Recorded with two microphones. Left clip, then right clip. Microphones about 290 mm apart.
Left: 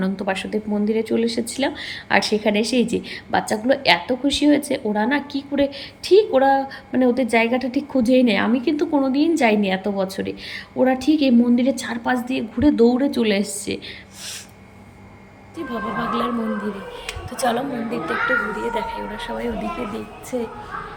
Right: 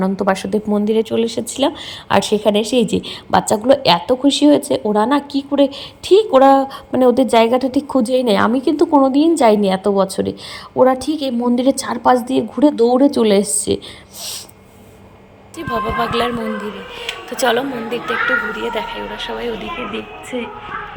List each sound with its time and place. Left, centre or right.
0.0 s speech: right
15.5 s speech: centre
17.4 s speech: centre